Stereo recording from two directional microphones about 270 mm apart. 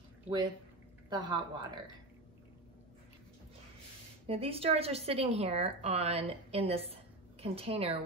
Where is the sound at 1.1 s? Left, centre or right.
Centre.